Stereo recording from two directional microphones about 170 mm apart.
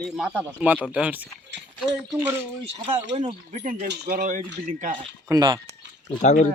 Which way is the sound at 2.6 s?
35° right (ahead or behind).